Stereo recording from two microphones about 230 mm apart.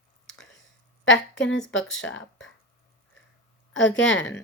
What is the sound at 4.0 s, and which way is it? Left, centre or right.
Speech, left.